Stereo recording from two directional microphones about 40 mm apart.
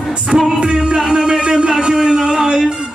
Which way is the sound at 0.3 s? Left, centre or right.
Right.